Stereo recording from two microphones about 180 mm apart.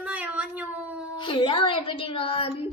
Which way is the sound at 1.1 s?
25° left (ahead or behind).